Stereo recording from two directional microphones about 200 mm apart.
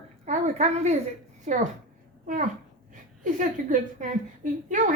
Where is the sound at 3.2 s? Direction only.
40° right (ahead or behind).